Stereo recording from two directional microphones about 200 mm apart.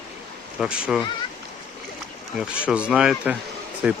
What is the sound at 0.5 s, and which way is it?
Speech, 5° right (ahead or behind).